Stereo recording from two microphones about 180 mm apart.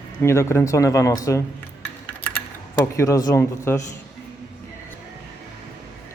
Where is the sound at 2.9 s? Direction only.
15° left (ahead or behind).